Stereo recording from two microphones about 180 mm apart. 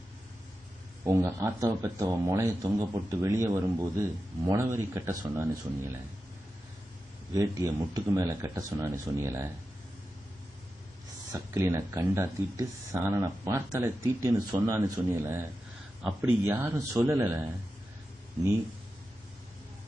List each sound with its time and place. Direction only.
1.0 s speech: 15° right (ahead or behind)
7.3 s speech: 20° right (ahead or behind)
11.3 s speech: 15° right (ahead or behind)